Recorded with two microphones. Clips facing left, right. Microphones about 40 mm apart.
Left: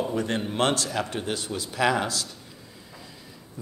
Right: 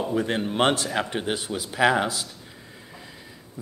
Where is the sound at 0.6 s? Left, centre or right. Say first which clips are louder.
Right 3 dB; right.